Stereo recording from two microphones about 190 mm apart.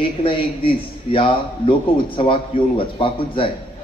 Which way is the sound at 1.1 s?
30° left (ahead or behind).